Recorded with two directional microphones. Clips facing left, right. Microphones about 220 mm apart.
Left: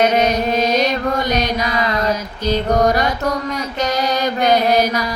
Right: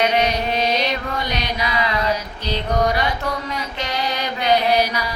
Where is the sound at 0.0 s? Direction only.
45° left (ahead or behind).